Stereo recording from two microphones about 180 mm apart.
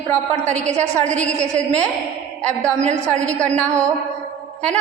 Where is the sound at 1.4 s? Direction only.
40° right (ahead or behind).